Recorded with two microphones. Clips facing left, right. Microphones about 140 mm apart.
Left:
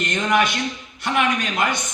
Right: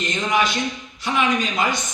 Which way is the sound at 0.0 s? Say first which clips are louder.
Left 2 dB; 55° left (ahead or behind).